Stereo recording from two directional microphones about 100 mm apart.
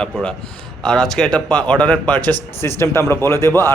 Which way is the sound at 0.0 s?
10° left (ahead or behind).